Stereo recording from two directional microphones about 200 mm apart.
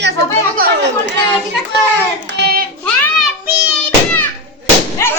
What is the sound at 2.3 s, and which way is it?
Child singing, 55° right (ahead or behind).